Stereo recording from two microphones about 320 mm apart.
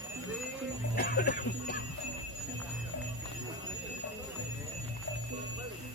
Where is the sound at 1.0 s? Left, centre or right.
Left.